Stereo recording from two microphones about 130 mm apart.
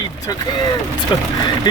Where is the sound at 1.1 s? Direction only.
35° left (ahead or behind).